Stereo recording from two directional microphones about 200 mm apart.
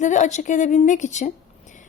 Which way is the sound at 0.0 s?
35° left (ahead or behind).